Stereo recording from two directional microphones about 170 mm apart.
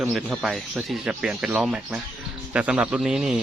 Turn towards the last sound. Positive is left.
turn(degrees=-5)  # may be behind; listen again after turning